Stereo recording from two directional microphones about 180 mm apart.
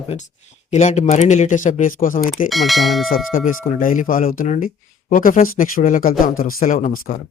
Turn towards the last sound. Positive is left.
turn(degrees=45)  # may be behind; listen again after turning